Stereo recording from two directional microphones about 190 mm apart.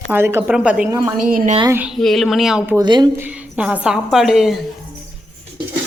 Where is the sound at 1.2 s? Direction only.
45° right (ahead or behind).